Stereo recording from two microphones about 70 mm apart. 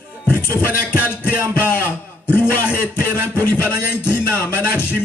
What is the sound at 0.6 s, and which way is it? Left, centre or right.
Music, left.